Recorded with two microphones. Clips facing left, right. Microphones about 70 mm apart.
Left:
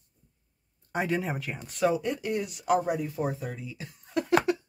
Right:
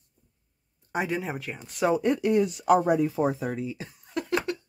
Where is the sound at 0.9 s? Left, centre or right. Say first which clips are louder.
Even; centre.